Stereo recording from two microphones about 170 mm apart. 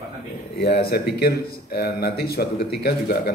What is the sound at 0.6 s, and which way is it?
A man's voice, 75° left (ahead or behind).